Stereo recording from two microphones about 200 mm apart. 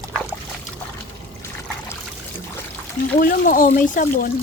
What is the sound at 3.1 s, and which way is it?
Speech, 45° left (ahead or behind).